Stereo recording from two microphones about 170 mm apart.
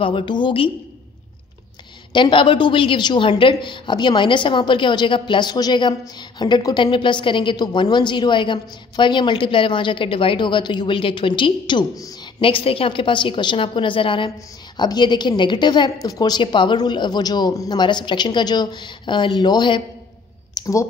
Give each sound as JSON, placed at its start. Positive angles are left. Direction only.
{"t": 0.0, "sound": "a woman's voice", "side_deg": 30}
{"t": 2.1, "sound": "a woman's voice", "side_deg": 30}